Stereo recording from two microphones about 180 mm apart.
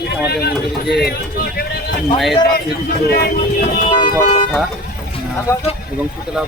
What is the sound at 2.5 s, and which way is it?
Speech, 60° left (ahead or behind).